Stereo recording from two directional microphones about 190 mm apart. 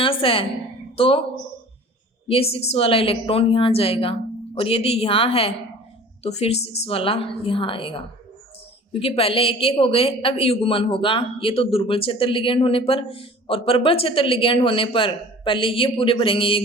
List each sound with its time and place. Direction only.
0.0 s speech: 30° left (ahead or behind)
2.2 s a woman's voice: 30° left (ahead or behind)